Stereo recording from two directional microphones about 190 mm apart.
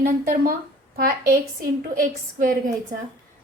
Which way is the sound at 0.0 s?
50° right (ahead or behind).